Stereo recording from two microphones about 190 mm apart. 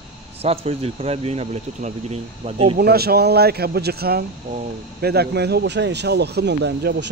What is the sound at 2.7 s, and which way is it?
Speech, 55° right (ahead or behind).